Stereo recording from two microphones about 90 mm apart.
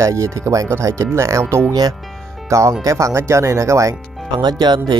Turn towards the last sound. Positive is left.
turn(degrees=-50)  # may be behind; listen again after turning